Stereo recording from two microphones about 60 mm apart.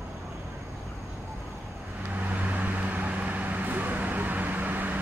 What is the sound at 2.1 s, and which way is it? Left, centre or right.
Vehicle, right.